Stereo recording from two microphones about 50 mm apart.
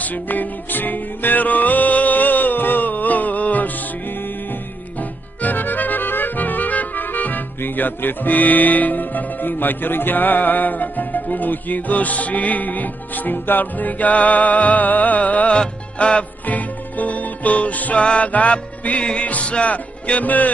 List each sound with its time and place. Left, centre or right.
0.0 s music: left
5.4 s music: left